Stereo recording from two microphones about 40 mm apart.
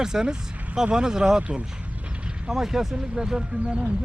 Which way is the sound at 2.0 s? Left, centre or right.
Right.